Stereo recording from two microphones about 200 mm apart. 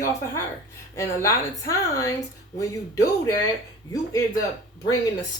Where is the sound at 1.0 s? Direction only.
15° left (ahead or behind).